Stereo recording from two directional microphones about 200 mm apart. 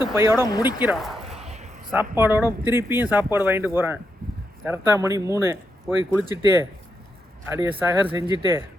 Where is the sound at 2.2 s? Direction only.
10° right (ahead or behind).